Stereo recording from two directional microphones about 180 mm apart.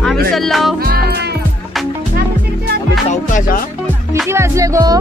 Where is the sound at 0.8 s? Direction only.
60° right (ahead or behind).